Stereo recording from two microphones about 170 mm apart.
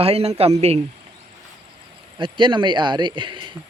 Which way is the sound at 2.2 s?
30° right (ahead or behind).